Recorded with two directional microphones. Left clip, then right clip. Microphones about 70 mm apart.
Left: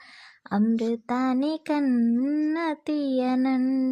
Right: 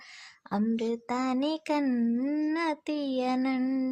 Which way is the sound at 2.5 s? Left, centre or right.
Left.